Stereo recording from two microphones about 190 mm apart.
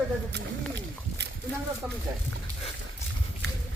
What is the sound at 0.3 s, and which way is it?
Speech, 65° right (ahead or behind).